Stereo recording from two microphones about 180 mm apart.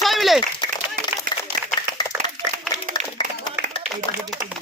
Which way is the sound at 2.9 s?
25° left (ahead or behind).